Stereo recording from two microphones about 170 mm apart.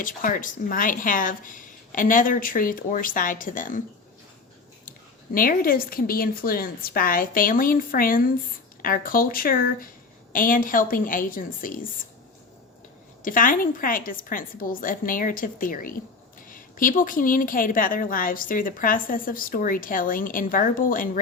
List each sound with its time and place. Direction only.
0.0 s a woman's voice: 55° left (ahead or behind)
4.9 s a woman's voice: 55° left (ahead or behind)
13.2 s a woman's voice: 55° left (ahead or behind)